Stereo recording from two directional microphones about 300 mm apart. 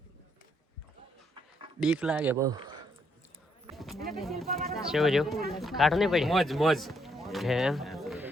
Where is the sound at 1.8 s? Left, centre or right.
Centre.